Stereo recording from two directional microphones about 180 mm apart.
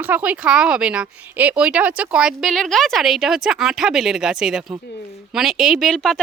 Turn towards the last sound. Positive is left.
turn(degrees=0)  # may be behind; listen again after turning